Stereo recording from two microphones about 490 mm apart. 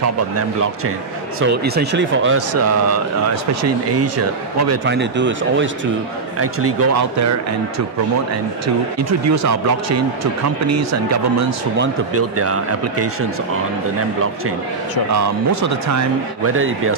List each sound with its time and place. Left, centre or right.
1.4 s speech: centre
9.3 s speech: right
15.1 s speech: right